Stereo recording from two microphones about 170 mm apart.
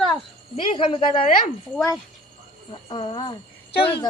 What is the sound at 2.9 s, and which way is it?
Speech, 30° left (ahead or behind).